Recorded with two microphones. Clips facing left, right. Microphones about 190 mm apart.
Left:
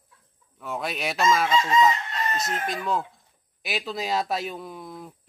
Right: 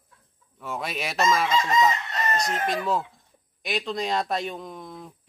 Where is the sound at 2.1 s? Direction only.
45° right (ahead or behind).